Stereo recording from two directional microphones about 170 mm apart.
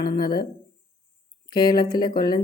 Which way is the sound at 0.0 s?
25° left (ahead or behind).